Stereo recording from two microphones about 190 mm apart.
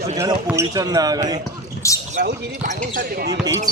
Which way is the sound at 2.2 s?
45° right (ahead or behind).